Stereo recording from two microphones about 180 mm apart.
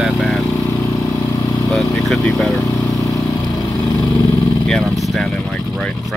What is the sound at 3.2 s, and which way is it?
Vehicle, 20° left (ahead or behind).